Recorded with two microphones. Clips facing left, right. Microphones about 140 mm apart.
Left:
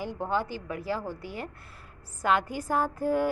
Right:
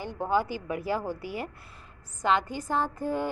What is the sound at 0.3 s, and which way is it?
A woman's voice, 10° right (ahead or behind).